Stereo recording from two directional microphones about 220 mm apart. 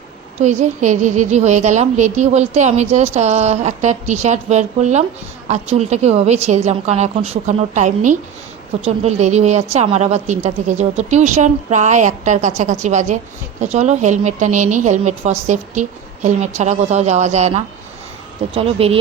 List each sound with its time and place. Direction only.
0.4 s a woman's voice: 35° right (ahead or behind)